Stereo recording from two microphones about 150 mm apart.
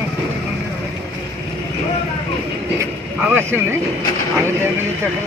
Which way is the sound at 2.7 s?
15° right (ahead or behind).